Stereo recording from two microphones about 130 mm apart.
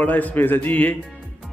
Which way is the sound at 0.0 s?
10° left (ahead or behind).